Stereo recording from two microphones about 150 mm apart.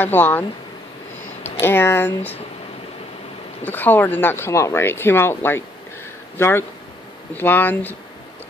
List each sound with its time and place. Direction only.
0.0 s speech: 10° left (ahead or behind)
3.6 s speech: 10° left (ahead or behind)